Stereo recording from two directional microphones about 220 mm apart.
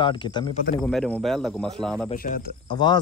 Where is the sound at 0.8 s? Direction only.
Centre (ahead or behind).